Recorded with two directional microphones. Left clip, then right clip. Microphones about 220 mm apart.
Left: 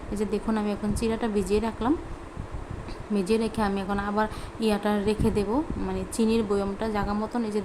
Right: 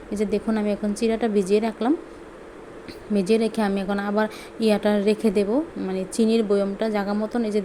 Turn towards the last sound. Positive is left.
turn(degrees=-15)  # may be behind; listen again after turning